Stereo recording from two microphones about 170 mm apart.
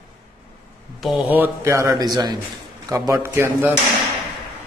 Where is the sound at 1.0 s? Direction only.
10° right (ahead or behind).